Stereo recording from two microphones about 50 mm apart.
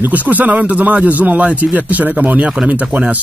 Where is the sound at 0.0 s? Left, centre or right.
Right.